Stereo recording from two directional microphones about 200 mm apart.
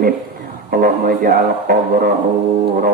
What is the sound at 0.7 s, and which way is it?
A man's voice, 45° right (ahead or behind).